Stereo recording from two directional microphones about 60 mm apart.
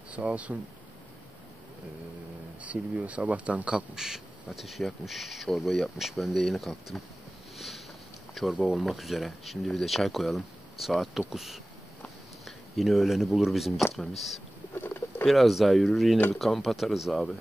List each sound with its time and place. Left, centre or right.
0.1 s speech: right
2.6 s speech: right; by 7.0 s centre
7.5 s a sound: centre
8.4 s speech: centre
14.8 s boat: left
15.2 s speech: centre